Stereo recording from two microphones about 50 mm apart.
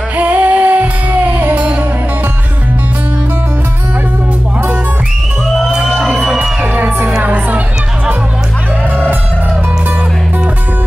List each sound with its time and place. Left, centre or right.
0.2 s music: right
5.7 s crowd: right
6.2 s music: centre
6.6 s music: right
7.2 s crowd: right